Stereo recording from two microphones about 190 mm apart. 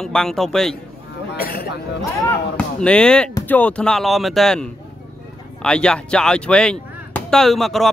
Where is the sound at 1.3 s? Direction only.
55° left (ahead or behind).